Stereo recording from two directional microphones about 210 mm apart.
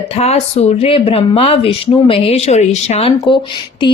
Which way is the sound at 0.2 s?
30° left (ahead or behind).